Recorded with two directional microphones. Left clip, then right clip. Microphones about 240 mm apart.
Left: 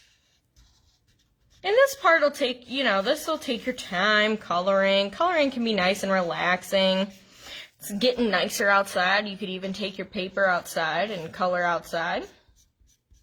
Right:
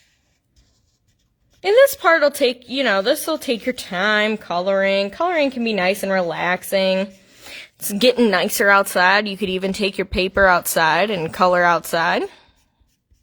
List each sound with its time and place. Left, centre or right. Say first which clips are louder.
1.6 s a woman's voice: right 7 dB; right